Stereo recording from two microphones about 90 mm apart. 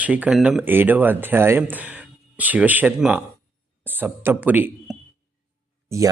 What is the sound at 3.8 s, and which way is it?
Speech, 20° right (ahead or behind).